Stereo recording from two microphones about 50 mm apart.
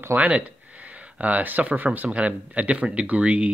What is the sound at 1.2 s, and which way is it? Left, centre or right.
Speech, right.